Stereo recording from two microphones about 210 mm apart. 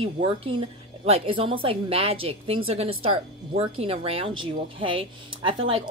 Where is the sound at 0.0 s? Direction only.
25° right (ahead or behind).